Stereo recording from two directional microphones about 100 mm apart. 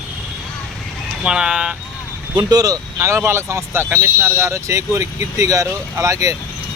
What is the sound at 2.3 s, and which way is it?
Speech, 40° right (ahead or behind).